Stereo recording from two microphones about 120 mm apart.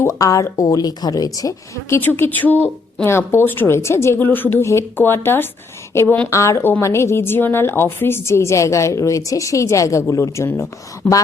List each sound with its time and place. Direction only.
0.0 s a woman's voice: 30° left (ahead or behind)